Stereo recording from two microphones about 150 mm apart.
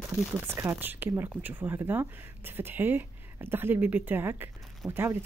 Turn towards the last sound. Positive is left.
turn(degrees=-15)  # may be behind; listen again after turning